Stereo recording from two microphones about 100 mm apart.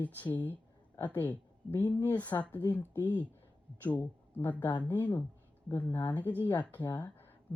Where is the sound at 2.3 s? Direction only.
20° left (ahead or behind).